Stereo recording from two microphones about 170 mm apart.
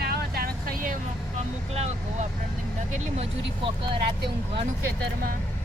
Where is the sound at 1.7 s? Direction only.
40° right (ahead or behind).